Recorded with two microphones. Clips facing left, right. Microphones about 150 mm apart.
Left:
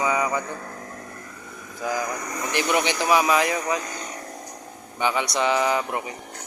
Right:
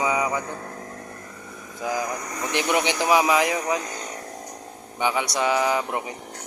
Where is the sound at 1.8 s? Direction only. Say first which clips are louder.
Even; 15° right (ahead or behind).